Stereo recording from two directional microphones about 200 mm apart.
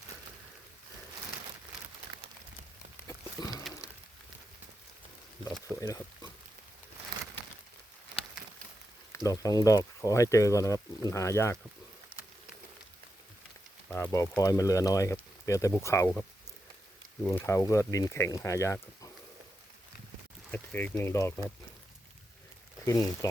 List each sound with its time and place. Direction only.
3.1 s a sound: 20° left (ahead or behind)
5.6 s speech: 15° left (ahead or behind)
9.1 s speech: 15° left (ahead or behind)
13.9 s speech: 15° left (ahead or behind)
17.2 s speech: 15° left (ahead or behind)
20.5 s speech: 10° left (ahead or behind)
22.9 s speech: 15° left (ahead or behind)